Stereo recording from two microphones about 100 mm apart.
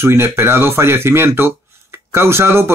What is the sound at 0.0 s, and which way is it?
Speech, 25° right (ahead or behind).